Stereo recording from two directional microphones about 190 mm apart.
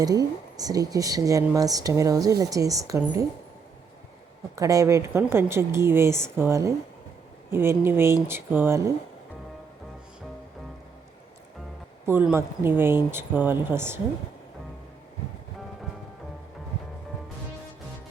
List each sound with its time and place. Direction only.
0.0 s speech: 20° right (ahead or behind)
4.5 s speech: 15° right (ahead or behind)
12.0 s speech: 10° right (ahead or behind)